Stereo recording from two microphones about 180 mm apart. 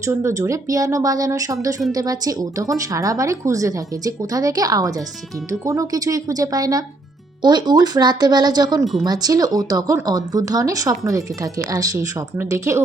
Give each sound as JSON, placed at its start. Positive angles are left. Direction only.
{"t": 0.0, "sound": "a woman's voice", "side_deg": -15}
{"t": 8.8, "sound": "speech", "side_deg": 0}
{"t": 9.0, "sound": "a woman's voice", "side_deg": -20}